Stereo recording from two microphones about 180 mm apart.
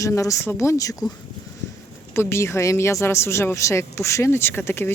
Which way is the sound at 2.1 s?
15° left (ahead or behind).